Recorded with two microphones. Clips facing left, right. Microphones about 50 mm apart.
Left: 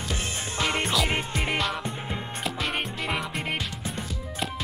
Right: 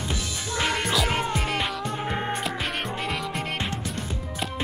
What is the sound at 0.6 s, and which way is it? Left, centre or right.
Music, left.